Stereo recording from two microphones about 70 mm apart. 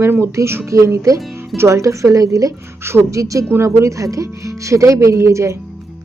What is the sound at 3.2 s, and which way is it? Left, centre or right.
Speech, right.